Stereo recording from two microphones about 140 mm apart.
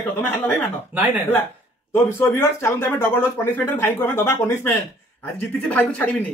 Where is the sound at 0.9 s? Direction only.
10° right (ahead or behind).